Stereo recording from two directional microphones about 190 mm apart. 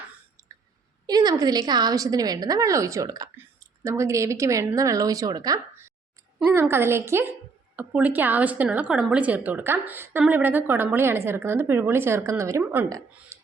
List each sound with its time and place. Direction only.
0.4 s throat clearing: 15° right (ahead or behind)
1.0 s a woman's voice: 20° right (ahead or behind)